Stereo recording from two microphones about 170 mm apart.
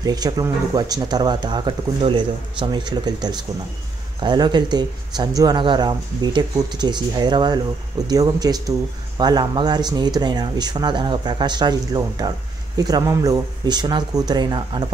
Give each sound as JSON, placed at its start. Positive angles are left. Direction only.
{"t": 0.0, "sound": "speech", "side_deg": -25}